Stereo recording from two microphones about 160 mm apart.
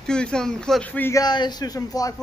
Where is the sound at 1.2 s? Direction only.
25° left (ahead or behind).